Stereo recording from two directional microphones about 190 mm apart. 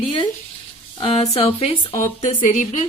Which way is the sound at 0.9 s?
30° left (ahead or behind).